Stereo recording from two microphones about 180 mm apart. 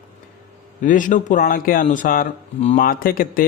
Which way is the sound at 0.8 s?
45° left (ahead or behind).